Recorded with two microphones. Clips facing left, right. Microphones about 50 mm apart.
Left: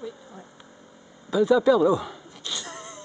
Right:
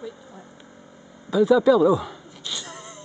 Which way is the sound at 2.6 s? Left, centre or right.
Centre.